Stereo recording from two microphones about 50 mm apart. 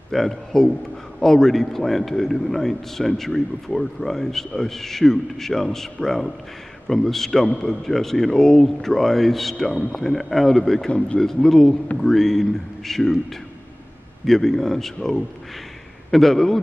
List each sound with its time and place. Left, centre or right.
0.1 s a man's voice: centre
14.2 s a man's voice: centre